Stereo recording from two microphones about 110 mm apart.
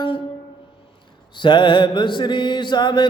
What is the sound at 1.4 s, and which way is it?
Mantra, 45° left (ahead or behind).